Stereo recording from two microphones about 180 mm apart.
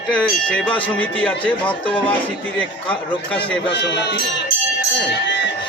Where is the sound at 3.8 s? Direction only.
75° left (ahead or behind).